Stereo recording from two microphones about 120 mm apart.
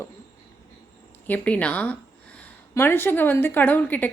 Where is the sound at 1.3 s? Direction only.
10° left (ahead or behind).